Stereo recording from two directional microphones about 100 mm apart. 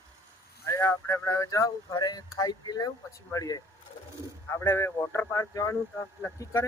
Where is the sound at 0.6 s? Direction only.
30° left (ahead or behind).